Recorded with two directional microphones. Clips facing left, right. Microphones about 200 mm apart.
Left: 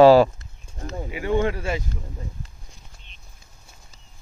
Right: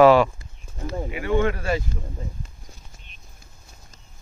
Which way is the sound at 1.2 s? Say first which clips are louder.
Even; 20° left (ahead or behind).